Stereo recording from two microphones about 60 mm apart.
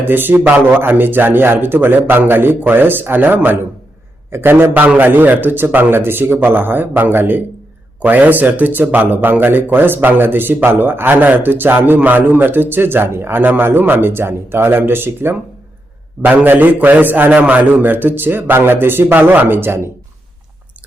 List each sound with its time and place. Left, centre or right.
0.0 s a man's voice: right